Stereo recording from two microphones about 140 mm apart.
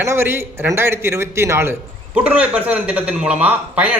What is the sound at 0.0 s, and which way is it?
A man's voice, 20° right (ahead or behind).